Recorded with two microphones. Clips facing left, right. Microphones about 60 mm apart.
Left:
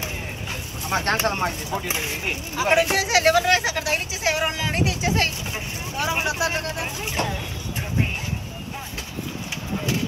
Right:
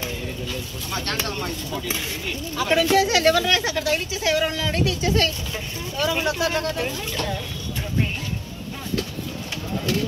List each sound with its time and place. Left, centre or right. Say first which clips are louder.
0.0 s vehicle: right 2 dB; left
1.9 s speech: left 1 dB; left